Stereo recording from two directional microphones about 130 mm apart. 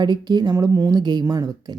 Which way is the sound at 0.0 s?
35° right (ahead or behind).